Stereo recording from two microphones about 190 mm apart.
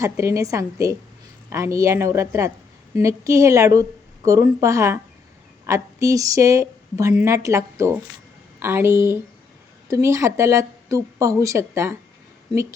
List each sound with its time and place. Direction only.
0.0 s a woman's voice: 15° right (ahead or behind)